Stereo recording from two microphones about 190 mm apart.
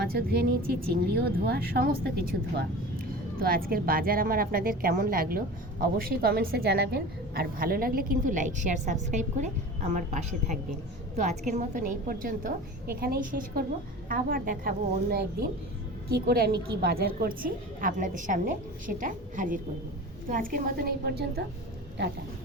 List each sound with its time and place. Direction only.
0.0 s a woman's voice: 55° right (ahead or behind)